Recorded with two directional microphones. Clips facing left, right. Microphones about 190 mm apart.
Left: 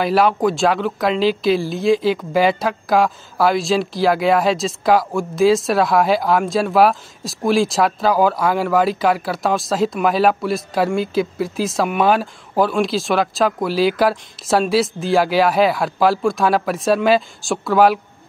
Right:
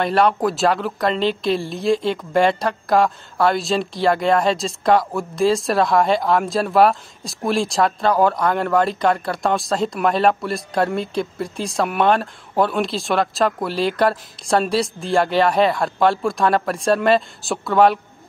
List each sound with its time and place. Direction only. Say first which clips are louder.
0.0 s speech: left 2 dB; centre (ahead or behind)